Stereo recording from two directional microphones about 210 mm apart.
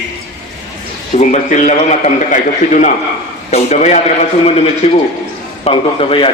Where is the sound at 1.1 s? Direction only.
35° left (ahead or behind).